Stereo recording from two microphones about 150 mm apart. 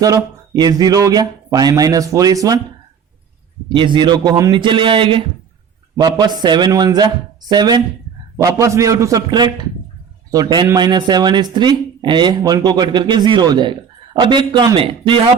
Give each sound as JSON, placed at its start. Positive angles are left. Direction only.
{"t": 0.0, "sound": "speech", "side_deg": -25}
{"t": 3.8, "sound": "a man's voice", "side_deg": -30}